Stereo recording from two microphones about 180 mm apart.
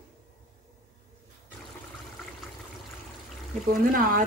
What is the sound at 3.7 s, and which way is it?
Speech, 50° right (ahead or behind).